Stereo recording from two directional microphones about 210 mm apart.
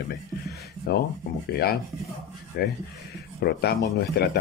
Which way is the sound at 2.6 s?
45° left (ahead or behind).